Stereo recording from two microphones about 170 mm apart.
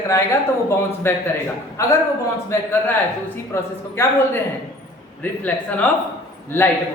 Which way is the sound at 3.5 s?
15° left (ahead or behind).